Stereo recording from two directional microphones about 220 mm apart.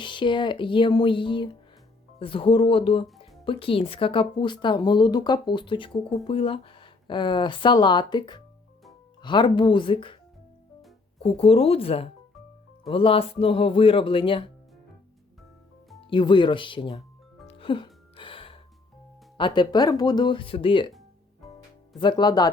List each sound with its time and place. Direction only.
0.0 s speech: 20° left (ahead or behind)
11.2 s speech: 25° left (ahead or behind)
16.0 s speech: 20° left (ahead or behind)
17.4 s music: 25° left (ahead or behind)
19.4 s speech: 20° left (ahead or behind)
22.0 s speech: 20° left (ahead or behind)